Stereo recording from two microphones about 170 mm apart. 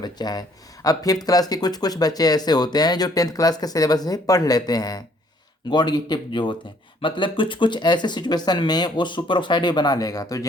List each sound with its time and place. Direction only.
0.0 s speech: 25° left (ahead or behind)